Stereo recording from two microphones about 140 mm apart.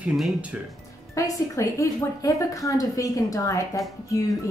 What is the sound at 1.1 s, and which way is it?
A woman's voice, 20° left (ahead or behind).